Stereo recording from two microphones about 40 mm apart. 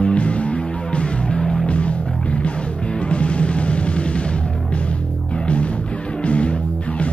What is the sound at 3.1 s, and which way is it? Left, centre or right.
Music, left.